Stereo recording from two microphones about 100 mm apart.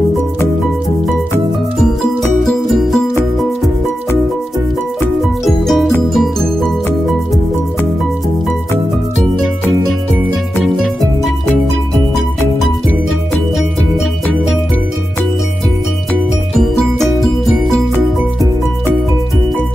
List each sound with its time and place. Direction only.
2.4 s music: centre (ahead or behind)
5.4 s music: centre (ahead or behind)